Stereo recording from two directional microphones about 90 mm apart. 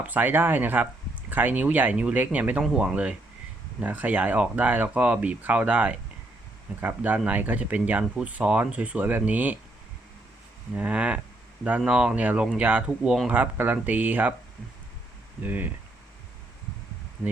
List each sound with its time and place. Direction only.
0.0 s speech: 20° right (ahead or behind)
10.8 s speech: 15° right (ahead or behind)